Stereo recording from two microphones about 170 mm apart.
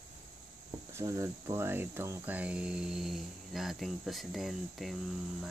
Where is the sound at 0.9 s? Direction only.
15° right (ahead or behind); by 5.0 s centre (ahead or behind).